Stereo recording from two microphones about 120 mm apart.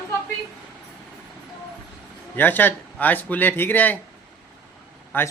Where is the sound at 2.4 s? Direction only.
15° left (ahead or behind).